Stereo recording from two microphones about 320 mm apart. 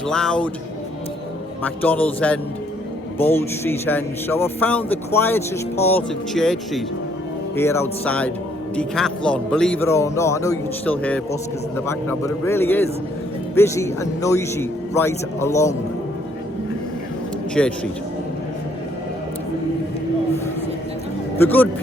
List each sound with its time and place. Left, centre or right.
0.1 s a man's voice: centre
1.6 s a man's voice: centre
17.5 s speech: centre
21.3 s speech: centre